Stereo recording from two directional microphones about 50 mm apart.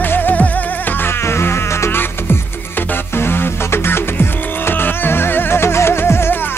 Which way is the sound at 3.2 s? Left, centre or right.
Left.